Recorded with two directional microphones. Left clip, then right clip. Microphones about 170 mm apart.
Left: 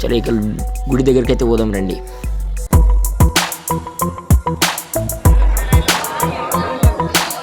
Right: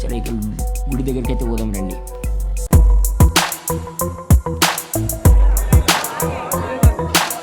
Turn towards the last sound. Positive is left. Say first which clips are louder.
# left 1 dB
turn(degrees=0)  # may be behind; listen again after turning